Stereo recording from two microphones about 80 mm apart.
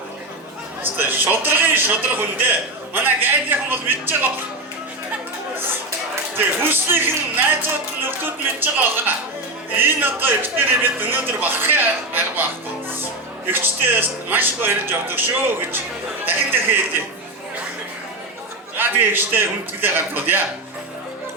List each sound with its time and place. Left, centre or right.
0.8 s speech: right
6.3 s speech: right
13.5 s speech: right
18.8 s speech: right